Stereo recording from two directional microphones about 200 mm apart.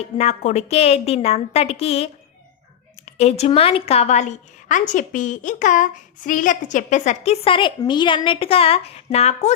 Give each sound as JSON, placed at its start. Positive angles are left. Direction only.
{"t": 0.0, "sound": "a woman's voice", "side_deg": 35}
{"t": 3.1, "sound": "a woman's voice", "side_deg": 30}